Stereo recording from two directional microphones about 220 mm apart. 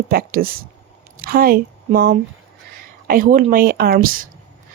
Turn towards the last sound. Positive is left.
turn(degrees=-40)  # may be behind; listen again after turning